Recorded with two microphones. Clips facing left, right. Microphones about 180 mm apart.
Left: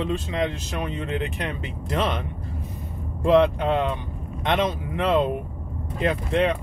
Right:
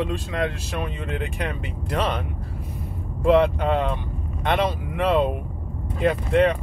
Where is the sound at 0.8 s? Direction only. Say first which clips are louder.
Left 3 dB; centre (ahead or behind).